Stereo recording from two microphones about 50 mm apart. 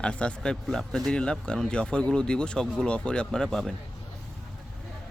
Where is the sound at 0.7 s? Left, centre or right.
Centre.